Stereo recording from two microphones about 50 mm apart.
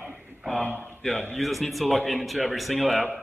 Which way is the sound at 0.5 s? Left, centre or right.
Left.